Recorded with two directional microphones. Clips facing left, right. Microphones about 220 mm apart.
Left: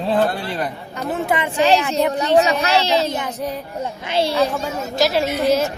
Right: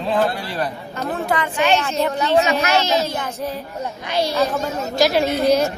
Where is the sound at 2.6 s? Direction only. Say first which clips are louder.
Left 1 dB; 30° left (ahead or behind).